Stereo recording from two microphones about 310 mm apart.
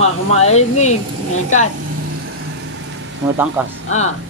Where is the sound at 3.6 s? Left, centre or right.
Centre.